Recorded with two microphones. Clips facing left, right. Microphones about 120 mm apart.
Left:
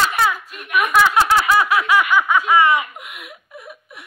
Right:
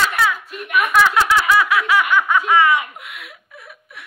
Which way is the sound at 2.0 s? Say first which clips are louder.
Even; 10° left (ahead or behind).